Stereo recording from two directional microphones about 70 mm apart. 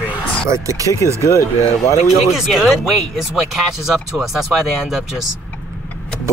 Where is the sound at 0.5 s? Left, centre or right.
Right.